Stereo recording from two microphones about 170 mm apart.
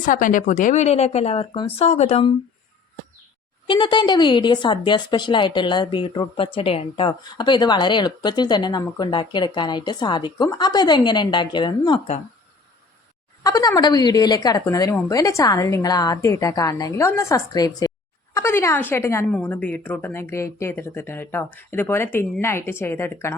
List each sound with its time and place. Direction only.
0.0 s a woman's voice: 50° left (ahead or behind)
3.7 s speech: 25° left (ahead or behind)
13.4 s speech: 20° left (ahead or behind)